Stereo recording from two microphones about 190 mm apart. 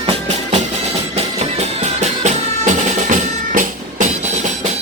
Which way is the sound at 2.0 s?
40° right (ahead or behind).